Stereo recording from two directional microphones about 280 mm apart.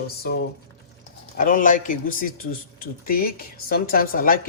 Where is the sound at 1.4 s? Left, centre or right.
Left.